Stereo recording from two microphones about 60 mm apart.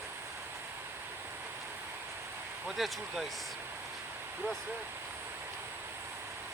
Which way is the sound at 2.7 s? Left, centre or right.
Centre.